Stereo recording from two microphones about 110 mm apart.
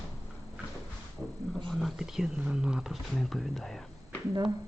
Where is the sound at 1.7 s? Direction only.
Centre (ahead or behind).